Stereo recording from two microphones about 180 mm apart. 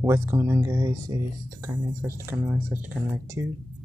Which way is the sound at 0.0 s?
15° right (ahead or behind).